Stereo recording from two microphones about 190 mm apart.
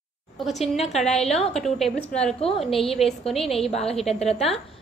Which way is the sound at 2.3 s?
30° left (ahead or behind).